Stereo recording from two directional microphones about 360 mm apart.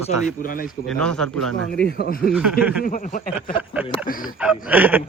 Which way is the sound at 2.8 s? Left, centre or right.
Left.